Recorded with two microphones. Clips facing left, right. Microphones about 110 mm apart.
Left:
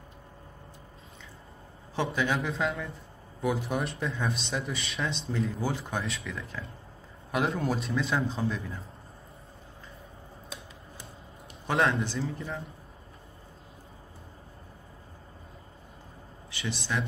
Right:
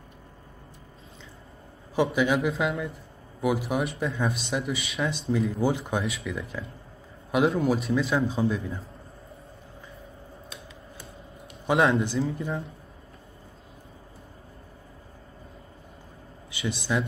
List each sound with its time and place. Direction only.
2.0 s speech: 10° right (ahead or behind)
6.0 s speech: 5° right (ahead or behind)
11.6 s speech: 10° right (ahead or behind)
16.4 s speech: 15° right (ahead or behind)